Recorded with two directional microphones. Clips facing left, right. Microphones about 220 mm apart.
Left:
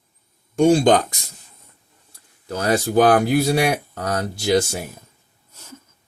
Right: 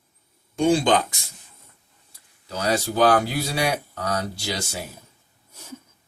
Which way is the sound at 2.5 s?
50° left (ahead or behind).